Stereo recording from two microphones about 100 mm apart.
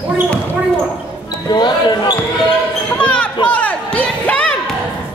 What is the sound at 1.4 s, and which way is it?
Speech, 45° left (ahead or behind).